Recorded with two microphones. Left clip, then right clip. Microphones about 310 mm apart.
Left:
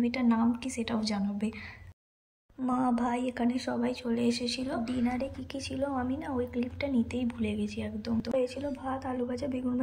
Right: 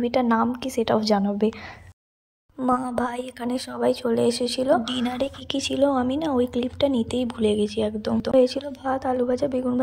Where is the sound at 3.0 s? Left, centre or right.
Centre.